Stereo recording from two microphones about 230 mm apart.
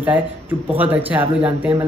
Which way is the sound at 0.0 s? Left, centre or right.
Centre.